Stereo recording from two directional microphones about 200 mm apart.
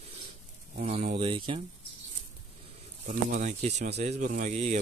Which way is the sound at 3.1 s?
40° right (ahead or behind).